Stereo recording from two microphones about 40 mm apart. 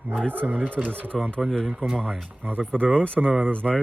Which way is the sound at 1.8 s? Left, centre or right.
Left.